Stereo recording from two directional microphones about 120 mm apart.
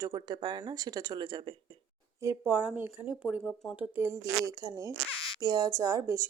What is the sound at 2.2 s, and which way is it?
Speech, 15° right (ahead or behind).